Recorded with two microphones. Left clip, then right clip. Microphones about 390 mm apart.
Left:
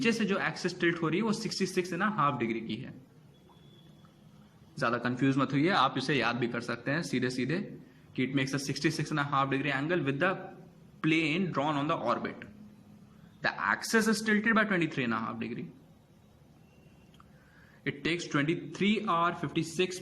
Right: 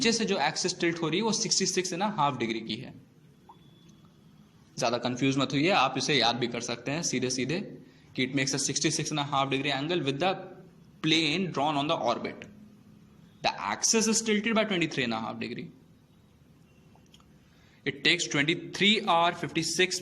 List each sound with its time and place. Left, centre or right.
0.0 s speech: centre
4.8 s speech: centre
17.8 s speech: centre